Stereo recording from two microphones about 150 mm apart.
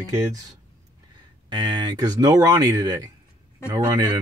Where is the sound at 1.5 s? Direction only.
30° right (ahead or behind).